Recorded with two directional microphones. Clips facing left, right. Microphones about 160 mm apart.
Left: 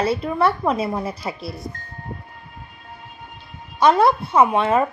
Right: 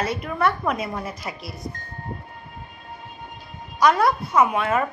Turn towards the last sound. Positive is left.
turn(degrees=30)  # may be behind; listen again after turning